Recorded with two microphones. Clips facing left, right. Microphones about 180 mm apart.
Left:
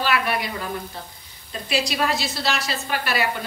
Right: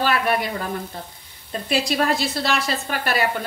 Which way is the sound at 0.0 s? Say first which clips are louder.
Right 2 dB; 45° right (ahead or behind).